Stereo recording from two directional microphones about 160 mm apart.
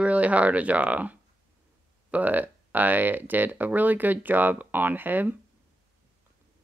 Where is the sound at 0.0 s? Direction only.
10° right (ahead or behind).